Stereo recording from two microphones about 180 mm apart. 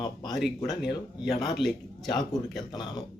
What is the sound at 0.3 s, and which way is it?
Speech, centre (ahead or behind).